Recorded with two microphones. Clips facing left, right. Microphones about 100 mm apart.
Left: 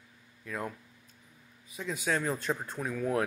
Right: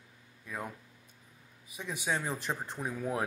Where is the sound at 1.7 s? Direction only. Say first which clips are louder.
Left 3 dB; 15° right (ahead or behind).